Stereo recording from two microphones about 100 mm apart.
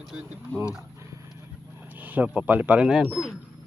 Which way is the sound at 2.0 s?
15° right (ahead or behind).